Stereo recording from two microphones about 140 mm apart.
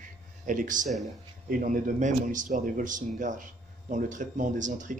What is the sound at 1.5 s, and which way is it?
A man's voice, 75° right (ahead or behind).